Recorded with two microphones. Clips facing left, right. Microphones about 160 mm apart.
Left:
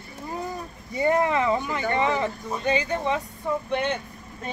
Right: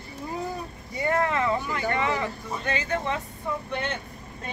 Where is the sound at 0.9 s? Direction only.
20° left (ahead or behind).